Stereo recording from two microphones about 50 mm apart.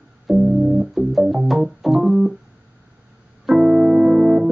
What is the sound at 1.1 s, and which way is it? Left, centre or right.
Organ, centre.